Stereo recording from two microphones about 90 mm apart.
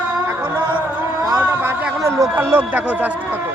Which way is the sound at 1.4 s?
25° right (ahead or behind).